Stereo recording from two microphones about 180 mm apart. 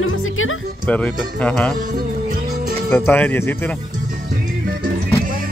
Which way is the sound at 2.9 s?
10° left (ahead or behind).